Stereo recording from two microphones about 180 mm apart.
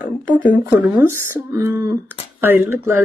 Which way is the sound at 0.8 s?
10° right (ahead or behind).